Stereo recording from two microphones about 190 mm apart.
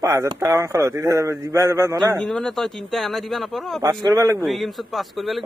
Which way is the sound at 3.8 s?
20° right (ahead or behind).